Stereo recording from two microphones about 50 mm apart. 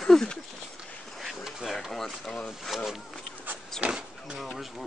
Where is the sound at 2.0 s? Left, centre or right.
Centre.